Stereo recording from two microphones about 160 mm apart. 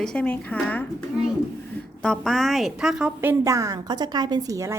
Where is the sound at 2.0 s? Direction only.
5° left (ahead or behind).